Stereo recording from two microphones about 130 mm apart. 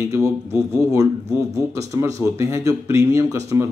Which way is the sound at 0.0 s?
25° right (ahead or behind).